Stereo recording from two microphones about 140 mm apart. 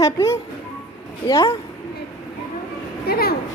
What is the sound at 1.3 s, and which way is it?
Speech, 35° left (ahead or behind).